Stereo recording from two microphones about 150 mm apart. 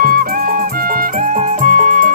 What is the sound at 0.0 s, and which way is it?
Music, 75° right (ahead or behind).